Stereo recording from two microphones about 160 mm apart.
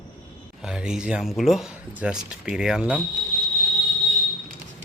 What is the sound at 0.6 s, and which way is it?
Speech, 5° right (ahead or behind).